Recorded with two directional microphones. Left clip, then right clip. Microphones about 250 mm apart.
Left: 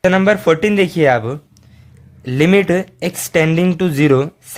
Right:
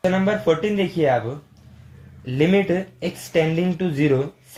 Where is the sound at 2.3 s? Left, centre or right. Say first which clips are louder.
Left 6 dB; left.